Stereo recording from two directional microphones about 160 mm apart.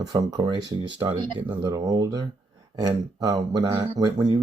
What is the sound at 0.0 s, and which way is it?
Speech, 25° right (ahead or behind).